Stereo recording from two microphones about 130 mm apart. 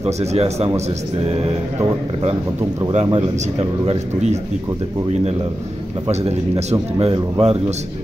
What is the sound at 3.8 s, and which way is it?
Speech, 60° right (ahead or behind).